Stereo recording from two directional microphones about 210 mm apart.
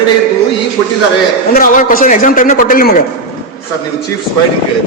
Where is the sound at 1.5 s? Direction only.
40° left (ahead or behind).